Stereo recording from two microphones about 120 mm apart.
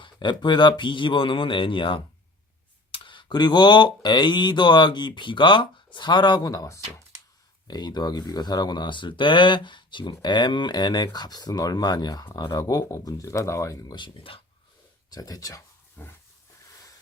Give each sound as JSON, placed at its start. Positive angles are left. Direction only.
{"t": 0.0, "sound": "speech", "side_deg": 40}
{"t": 13.9, "sound": "speech", "side_deg": 45}
{"t": 15.1, "sound": "speech", "side_deg": 30}